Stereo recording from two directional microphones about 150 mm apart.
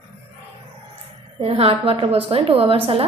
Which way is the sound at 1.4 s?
45° right (ahead or behind).